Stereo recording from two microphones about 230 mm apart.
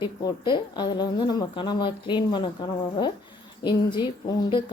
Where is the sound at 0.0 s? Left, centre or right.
Centre.